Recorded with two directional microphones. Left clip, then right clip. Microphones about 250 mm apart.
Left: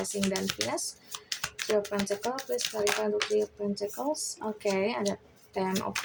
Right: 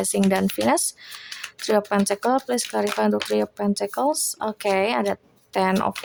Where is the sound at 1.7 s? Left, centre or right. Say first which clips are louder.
Right 8 dB; right.